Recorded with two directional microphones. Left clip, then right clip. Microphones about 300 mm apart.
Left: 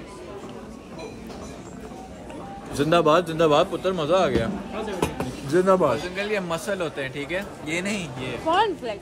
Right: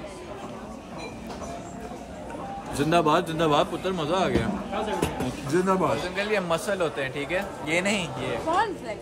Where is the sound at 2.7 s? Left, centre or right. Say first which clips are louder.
Left 3 dB; centre.